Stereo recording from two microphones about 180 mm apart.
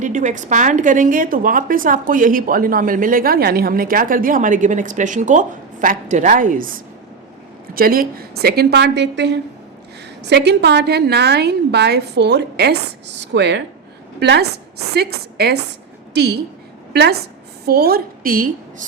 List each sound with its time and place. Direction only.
0.0 s a woman's voice: 45° right (ahead or behind)